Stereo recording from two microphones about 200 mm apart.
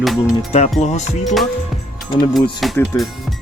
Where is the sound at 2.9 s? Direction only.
15° left (ahead or behind).